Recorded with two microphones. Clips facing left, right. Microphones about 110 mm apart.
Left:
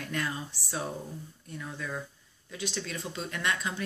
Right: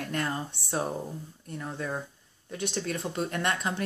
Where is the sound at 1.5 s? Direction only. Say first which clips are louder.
Right 4 dB; 30° right (ahead or behind).